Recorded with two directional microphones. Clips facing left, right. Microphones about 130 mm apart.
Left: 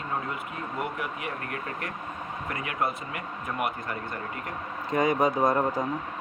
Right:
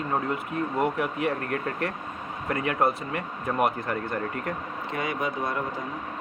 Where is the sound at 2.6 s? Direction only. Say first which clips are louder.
Right 6 dB; 35° right (ahead or behind).